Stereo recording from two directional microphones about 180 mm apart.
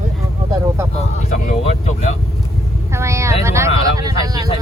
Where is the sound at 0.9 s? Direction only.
35° left (ahead or behind).